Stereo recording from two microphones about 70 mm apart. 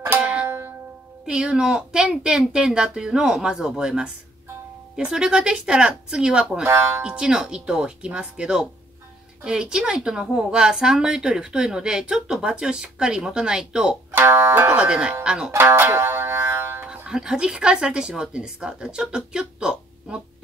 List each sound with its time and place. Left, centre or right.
0.2 s music: centre
0.5 s music: right
1.2 s a woman's voice: centre
14.1 s speech: right
14.8 s a woman's voice: centre
15.5 s music: right
16.9 s a woman's voice: centre